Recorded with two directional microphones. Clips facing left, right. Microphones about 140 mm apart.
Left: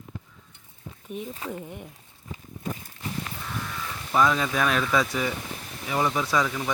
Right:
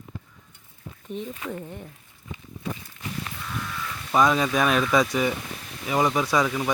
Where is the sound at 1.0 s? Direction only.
10° left (ahead or behind).